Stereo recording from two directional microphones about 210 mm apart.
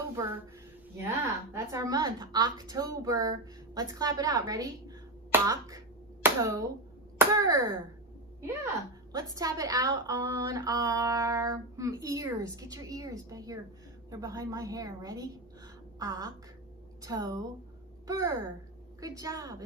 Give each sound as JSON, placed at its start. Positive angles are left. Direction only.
{"t": 0.1, "sound": "a woman's voice", "side_deg": -15}
{"t": 9.1, "sound": "a woman's voice", "side_deg": -15}